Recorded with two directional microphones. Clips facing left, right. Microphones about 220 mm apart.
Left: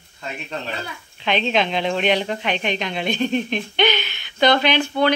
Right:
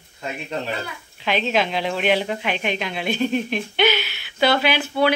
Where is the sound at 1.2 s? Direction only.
5° right (ahead or behind).